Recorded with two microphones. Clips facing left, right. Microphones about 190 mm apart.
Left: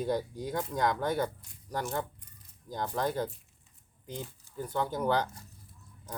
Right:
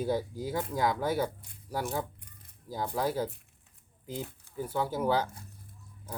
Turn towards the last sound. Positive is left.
turn(degrees=-5)  # may be behind; listen again after turning